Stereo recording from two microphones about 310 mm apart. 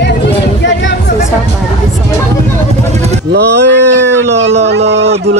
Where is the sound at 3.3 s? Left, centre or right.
Right.